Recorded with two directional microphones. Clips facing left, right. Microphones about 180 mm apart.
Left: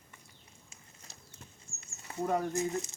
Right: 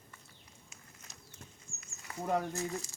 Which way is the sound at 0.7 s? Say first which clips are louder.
Even; 30° left (ahead or behind).